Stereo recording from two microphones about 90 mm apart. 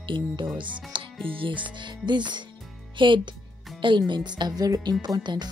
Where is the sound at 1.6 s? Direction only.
60° right (ahead or behind).